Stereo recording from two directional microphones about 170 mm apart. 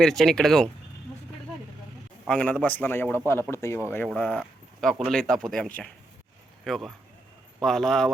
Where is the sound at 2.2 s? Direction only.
5° left (ahead or behind).